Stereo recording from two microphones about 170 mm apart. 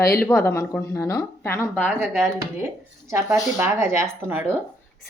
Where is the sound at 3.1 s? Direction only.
15° right (ahead or behind).